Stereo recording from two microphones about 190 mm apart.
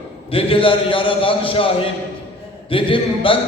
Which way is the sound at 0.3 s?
30° left (ahead or behind).